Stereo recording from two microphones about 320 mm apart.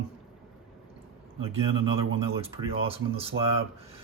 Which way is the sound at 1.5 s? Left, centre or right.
Centre.